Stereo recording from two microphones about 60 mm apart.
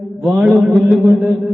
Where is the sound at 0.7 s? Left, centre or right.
Right.